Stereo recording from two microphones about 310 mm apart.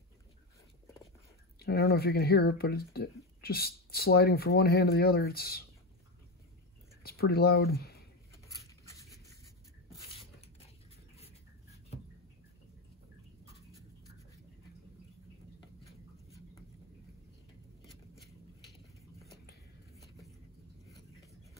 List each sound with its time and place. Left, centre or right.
1.6 s speech: left
7.0 s speech: left
17.8 s a sound: centre